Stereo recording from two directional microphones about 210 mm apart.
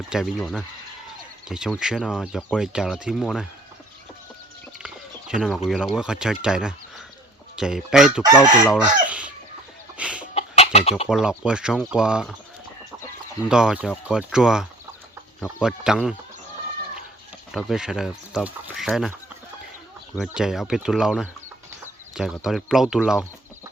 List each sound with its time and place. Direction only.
0.1 s speech: centre (ahead or behind)
5.3 s speech: centre (ahead or behind)
8.7 s chicken: 5° right (ahead or behind)
10.3 s chicken: 30° left (ahead or behind)
11.1 s speech: 5° right (ahead or behind)
13.5 s speech: 5° right (ahead or behind)
17.5 s speech: centre (ahead or behind)
20.1 s speech: 5° right (ahead or behind)